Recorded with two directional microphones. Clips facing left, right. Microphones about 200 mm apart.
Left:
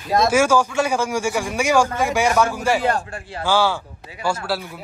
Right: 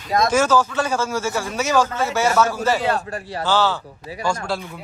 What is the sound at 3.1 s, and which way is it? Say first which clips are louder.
Speech: right 4 dB; 35° right (ahead or behind).